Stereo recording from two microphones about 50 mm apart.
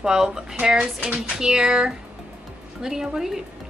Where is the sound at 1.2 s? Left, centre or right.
Centre.